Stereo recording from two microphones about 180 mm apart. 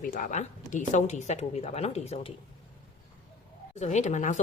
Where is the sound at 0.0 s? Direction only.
50° left (ahead or behind).